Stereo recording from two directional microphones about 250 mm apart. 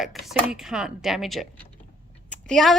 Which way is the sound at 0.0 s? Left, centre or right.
Centre.